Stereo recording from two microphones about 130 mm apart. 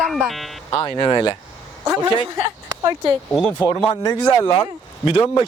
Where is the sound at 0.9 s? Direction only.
35° left (ahead or behind).